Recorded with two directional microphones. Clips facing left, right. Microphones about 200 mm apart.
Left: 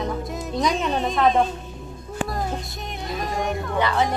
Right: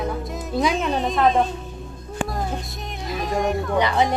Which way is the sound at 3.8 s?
15° right (ahead or behind).